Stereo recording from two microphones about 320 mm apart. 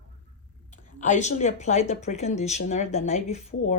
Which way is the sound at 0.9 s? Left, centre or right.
Left.